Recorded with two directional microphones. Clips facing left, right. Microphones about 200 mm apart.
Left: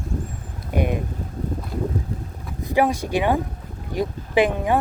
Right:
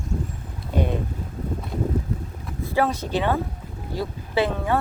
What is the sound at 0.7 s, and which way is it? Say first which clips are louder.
Speech: left 1 dB; 15° left (ahead or behind).